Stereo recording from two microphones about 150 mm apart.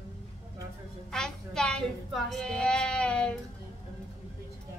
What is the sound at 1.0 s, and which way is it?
A woman's voice, 5° left (ahead or behind).